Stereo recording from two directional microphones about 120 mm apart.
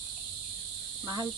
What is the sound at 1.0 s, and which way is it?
Speech, 30° right (ahead or behind).